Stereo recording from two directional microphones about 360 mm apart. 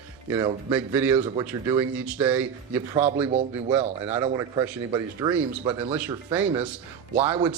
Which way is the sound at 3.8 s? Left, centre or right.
Centre.